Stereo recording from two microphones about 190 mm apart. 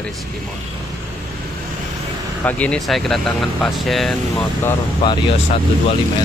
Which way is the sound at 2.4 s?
5° left (ahead or behind).